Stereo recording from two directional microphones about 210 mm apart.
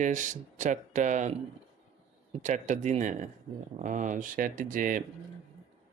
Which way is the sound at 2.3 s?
35° right (ahead or behind).